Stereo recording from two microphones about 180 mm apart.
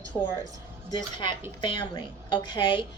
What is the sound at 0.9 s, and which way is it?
Speech, 25° left (ahead or behind).